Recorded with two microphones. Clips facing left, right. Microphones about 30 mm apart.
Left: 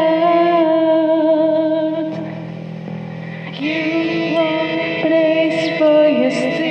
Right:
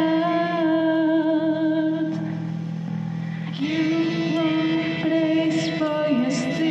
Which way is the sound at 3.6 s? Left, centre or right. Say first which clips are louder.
Left 4 dB; left.